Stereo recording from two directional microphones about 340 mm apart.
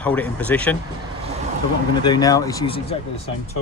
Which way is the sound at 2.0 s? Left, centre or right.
Centre.